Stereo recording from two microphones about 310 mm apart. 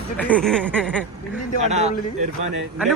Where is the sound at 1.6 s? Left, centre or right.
Right.